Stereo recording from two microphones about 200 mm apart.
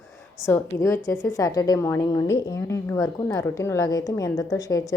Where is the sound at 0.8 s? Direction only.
15° left (ahead or behind).